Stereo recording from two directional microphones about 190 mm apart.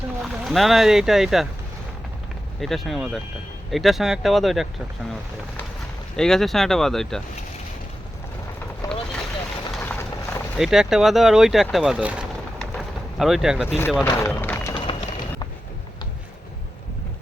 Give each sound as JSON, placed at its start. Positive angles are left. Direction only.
{"t": 0.2, "sound": "speech", "side_deg": 0}
{"t": 2.6, "sound": "speech", "side_deg": 0}
{"t": 6.1, "sound": "speech", "side_deg": 0}
{"t": 8.8, "sound": "vehicle", "side_deg": 20}
{"t": 10.6, "sound": "speech", "side_deg": 0}
{"t": 14.0, "sound": "a sound", "side_deg": 10}